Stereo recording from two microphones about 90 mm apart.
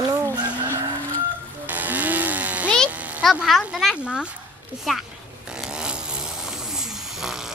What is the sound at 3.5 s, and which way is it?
Speech, centre (ahead or behind).